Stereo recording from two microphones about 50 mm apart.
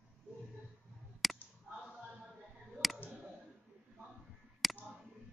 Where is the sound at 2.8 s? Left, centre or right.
Centre.